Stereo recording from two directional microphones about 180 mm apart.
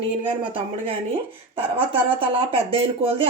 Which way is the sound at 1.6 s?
30° right (ahead or behind).